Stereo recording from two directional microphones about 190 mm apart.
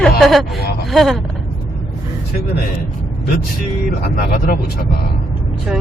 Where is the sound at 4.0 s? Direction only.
50° left (ahead or behind).